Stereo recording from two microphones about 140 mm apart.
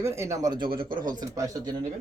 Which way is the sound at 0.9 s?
75° right (ahead or behind).